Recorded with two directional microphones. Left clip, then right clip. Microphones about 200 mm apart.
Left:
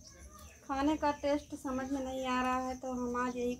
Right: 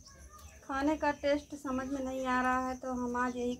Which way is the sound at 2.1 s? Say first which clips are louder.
Right 3 dB; 10° right (ahead or behind).